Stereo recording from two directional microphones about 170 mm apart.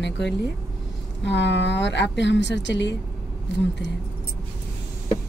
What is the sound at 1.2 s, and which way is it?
Speech, 90° left.